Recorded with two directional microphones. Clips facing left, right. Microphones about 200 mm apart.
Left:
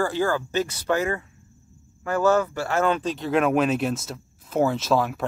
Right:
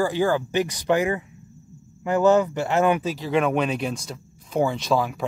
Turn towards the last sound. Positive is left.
turn(degrees=0)  # may be behind; listen again after turning